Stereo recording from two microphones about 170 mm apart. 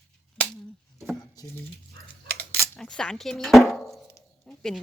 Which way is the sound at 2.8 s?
5° left (ahead or behind).